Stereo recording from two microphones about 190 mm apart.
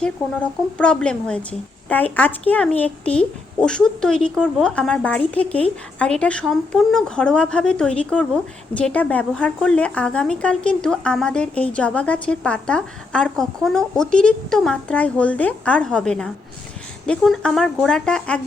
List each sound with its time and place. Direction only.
0.0 s a woman's voice: 5° left (ahead or behind)